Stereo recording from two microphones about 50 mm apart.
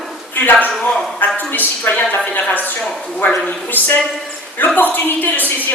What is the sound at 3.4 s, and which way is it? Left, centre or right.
A woman's voice, left.